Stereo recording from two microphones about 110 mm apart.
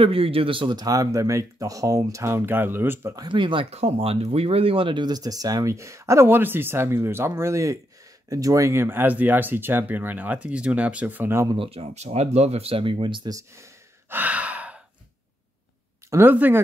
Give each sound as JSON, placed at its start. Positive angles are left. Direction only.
{"t": 0.0, "sound": "speech", "side_deg": -60}
{"t": 3.2, "sound": "speech", "side_deg": -45}
{"t": 3.7, "sound": "speech", "side_deg": -60}
{"t": 11.5, "sound": "speech", "side_deg": -60}
{"t": 13.3, "sound": "sigh", "side_deg": -30}
{"t": 16.1, "sound": "speech", "side_deg": -20}